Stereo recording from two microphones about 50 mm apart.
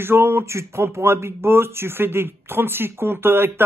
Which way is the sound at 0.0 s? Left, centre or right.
Right.